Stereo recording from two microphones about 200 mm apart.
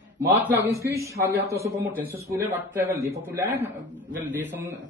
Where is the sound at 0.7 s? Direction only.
15° right (ahead or behind).